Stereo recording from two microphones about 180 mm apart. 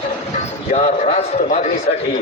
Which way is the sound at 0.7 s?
40° left (ahead or behind).